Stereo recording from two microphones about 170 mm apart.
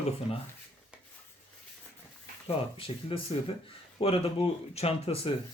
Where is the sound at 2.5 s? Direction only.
35° left (ahead or behind).